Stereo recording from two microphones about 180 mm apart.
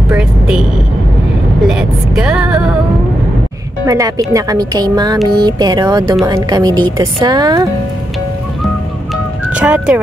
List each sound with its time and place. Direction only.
0.1 s speech: 5° right (ahead or behind)
1.7 s speech: 5° right (ahead or behind)
3.8 s speech: 20° right (ahead or behind)
9.5 s speech: 5° right (ahead or behind)